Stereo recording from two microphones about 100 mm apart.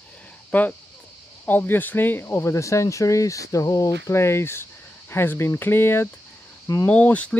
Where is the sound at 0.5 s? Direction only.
15° left (ahead or behind).